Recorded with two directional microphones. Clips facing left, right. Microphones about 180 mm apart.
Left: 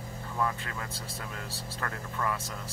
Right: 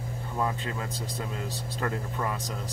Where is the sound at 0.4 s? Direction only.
25° right (ahead or behind).